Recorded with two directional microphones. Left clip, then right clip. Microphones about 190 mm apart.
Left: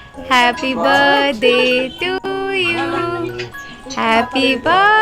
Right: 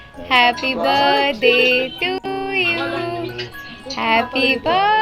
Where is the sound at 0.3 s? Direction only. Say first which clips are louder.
Left 1 dB; 20° left (ahead or behind).